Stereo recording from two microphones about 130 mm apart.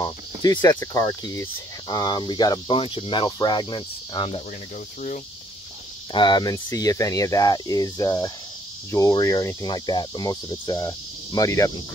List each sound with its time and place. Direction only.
0.0 s speech: 30° left (ahead or behind)
2.8 s speech: 45° left (ahead or behind)
6.1 s speech: 35° left (ahead or behind)